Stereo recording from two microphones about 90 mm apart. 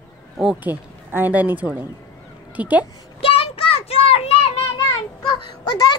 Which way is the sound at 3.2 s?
90° left.